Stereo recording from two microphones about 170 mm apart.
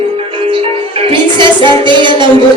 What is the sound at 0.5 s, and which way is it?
Music, 30° right (ahead or behind).